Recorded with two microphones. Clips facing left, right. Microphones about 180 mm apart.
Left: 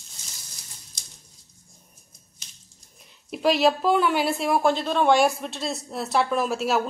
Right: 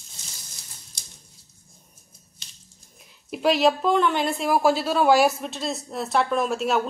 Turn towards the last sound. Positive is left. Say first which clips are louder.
# right 1 dB
turn(degrees=0)  # may be behind; listen again after turning